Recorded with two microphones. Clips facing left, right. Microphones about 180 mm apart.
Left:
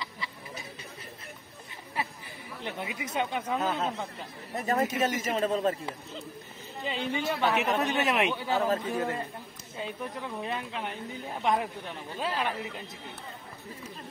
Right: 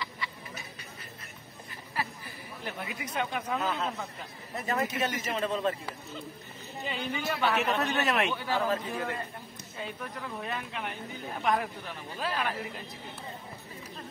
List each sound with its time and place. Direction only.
2.6 s speech: 20° left (ahead or behind)
4.6 s speech: 45° left (ahead or behind)
6.9 s speech: 25° left (ahead or behind)
7.6 s a man's voice: 10° left (ahead or behind)